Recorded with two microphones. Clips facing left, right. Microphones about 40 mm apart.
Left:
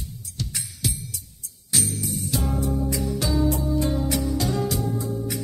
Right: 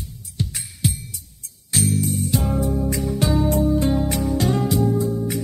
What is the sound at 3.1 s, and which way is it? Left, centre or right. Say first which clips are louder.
Music: right 3 dB; right.